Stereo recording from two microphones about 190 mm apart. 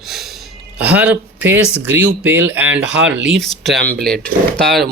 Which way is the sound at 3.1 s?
70° right (ahead or behind).